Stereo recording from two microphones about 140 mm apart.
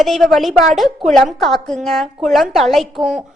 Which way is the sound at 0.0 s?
Centre (ahead or behind).